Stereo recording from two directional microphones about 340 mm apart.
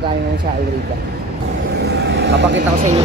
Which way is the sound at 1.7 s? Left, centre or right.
Right.